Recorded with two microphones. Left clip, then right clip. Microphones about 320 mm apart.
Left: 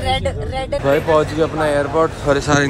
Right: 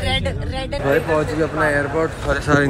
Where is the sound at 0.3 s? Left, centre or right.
Left.